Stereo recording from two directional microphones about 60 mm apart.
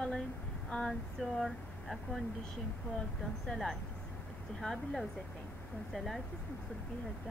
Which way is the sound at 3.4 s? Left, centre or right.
Centre.